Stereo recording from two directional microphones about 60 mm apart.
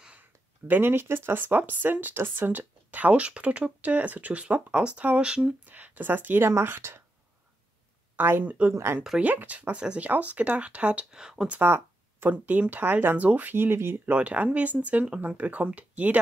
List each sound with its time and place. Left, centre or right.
0.1 s speech: right; by 5.5 s centre
5.7 s speech: right
8.2 s speech: right
8.7 s speech: right
9.2 s speech: right; by 11.4 s centre
11.6 s a sound: right
12.3 s speech: right